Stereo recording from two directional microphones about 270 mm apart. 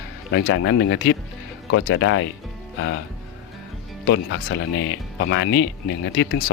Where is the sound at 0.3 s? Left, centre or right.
Left.